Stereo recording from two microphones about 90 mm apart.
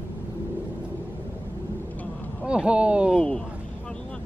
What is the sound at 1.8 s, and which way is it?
Vehicle, 20° left (ahead or behind).